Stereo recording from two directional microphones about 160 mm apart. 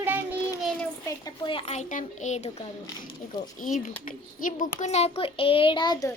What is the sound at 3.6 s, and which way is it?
A child's voice, 60° left (ahead or behind).